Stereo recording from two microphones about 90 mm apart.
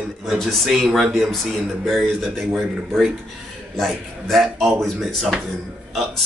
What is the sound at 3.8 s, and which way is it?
Speech, centre (ahead or behind).